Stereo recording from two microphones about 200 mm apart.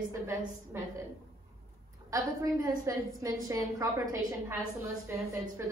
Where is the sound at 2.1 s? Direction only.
15° right (ahead or behind).